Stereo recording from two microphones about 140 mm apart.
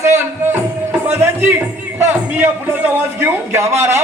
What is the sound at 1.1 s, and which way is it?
Music, 15° right (ahead or behind).